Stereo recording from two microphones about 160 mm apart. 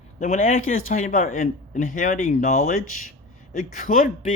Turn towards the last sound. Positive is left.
turn(degrees=60)  # may be behind; listen again after turning